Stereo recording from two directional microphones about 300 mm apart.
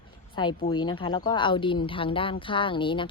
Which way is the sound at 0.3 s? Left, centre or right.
Centre.